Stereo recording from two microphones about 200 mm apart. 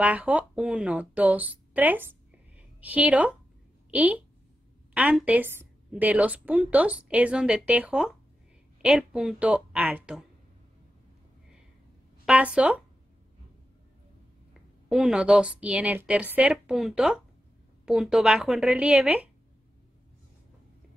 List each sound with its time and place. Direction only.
0.0 s a woman's voice: 5° right (ahead or behind)
12.3 s a woman's voice: 5° right (ahead or behind)
14.9 s a woman's voice: 5° right (ahead or behind)